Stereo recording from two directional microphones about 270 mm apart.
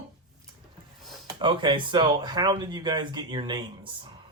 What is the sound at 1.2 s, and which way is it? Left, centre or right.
Speech, centre.